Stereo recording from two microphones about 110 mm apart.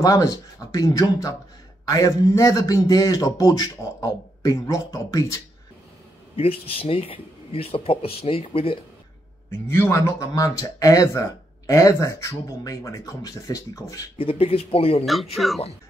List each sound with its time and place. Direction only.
0.0 s a man's voice: 35° left (ahead or behind)
6.3 s speech: 60° left (ahead or behind)
9.5 s speech: 20° left (ahead or behind)
14.1 s speech: 60° left (ahead or behind)
15.3 s speech: centre (ahead or behind)